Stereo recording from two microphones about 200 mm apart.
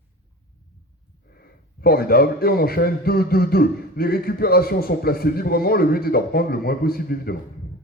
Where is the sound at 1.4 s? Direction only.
50° left (ahead or behind).